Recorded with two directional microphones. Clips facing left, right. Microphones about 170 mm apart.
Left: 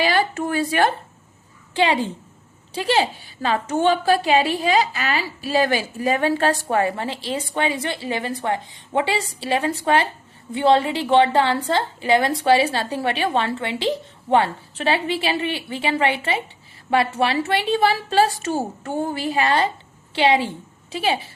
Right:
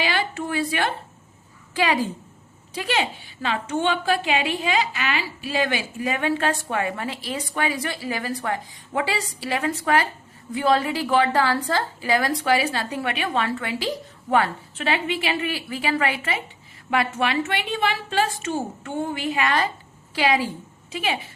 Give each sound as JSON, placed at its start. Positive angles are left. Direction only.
{"t": 0.0, "sound": "speech", "side_deg": 40}
{"t": 1.7, "sound": "a woman's voice", "side_deg": 25}